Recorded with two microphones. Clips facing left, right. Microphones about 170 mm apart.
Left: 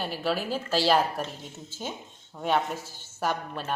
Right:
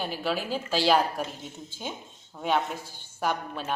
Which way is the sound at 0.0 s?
5° left (ahead or behind).